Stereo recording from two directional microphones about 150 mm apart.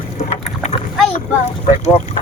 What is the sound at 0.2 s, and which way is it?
Boat, 45° left (ahead or behind).